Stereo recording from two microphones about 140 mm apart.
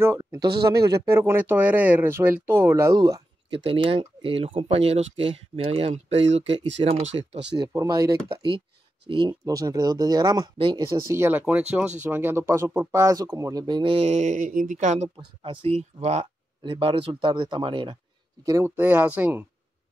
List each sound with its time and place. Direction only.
0.0 s speech: 20° right (ahead or behind)
3.4 s speech: 40° right (ahead or behind)
7.5 s speech: 30° right (ahead or behind)
9.4 s speech: 25° right (ahead or behind)
11.0 s speech: 20° right (ahead or behind); by 15.0 s 60° right (ahead or behind)
15.1 s speech: 40° right (ahead or behind)
18.4 s speech: 20° right (ahead or behind)